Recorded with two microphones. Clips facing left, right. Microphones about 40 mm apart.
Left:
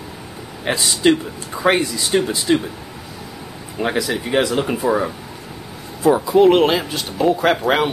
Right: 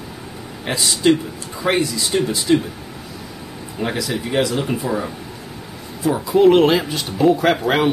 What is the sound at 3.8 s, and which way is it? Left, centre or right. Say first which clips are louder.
Speech: left 2 dB; centre.